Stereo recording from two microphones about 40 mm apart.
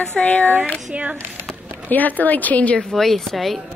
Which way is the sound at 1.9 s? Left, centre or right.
Left.